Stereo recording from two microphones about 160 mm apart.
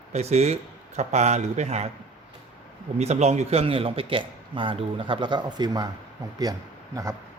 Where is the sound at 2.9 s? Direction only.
45° right (ahead or behind); by 5.8 s 25° right (ahead or behind).